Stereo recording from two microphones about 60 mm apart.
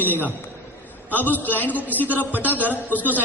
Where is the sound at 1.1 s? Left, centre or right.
Left.